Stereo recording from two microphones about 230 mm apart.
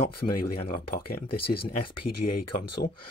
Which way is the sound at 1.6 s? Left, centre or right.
Left.